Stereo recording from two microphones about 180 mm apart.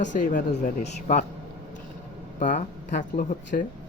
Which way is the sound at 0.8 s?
40° left (ahead or behind).